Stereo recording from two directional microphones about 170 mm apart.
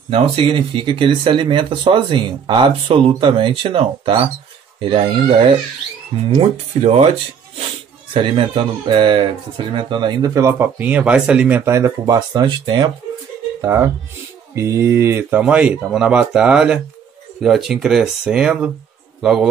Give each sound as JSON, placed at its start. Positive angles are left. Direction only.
{"t": 0.1, "sound": "speech", "side_deg": -35}